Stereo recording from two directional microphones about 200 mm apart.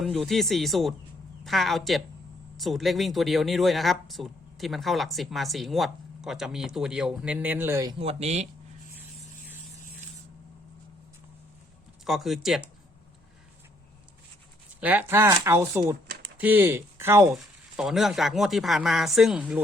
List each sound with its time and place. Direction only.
0.0 s speech: centre (ahead or behind)
7.9 s speech: 30° right (ahead or behind)
12.0 s speech: centre (ahead or behind)
14.8 s speech: 10° right (ahead or behind)
17.3 s speech: centre (ahead or behind)